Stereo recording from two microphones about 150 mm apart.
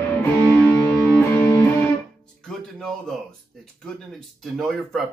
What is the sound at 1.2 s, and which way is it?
Music, 10° left (ahead or behind).